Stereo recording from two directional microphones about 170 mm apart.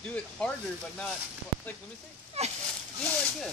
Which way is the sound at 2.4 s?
40° right (ahead or behind).